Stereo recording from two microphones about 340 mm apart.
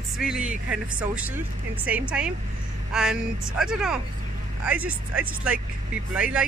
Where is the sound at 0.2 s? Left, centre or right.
Centre.